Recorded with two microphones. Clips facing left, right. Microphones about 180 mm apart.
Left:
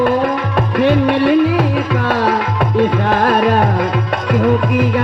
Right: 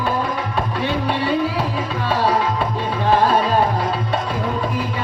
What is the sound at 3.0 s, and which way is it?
Music, 70° left (ahead or behind).